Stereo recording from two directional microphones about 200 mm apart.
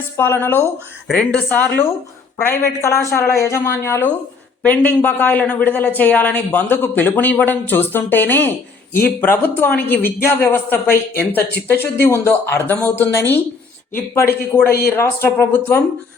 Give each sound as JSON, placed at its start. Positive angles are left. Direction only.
{"t": 0.2, "sound": "a woman's voice", "side_deg": 10}
{"t": 14.5, "sound": "a woman's voice", "side_deg": 10}